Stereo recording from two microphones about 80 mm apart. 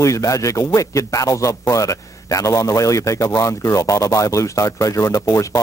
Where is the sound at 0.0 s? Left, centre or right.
Left.